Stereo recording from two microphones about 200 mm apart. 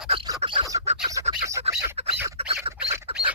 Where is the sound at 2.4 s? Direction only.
30° right (ahead or behind).